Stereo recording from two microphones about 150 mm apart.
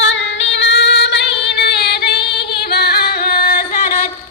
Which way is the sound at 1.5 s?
90° left.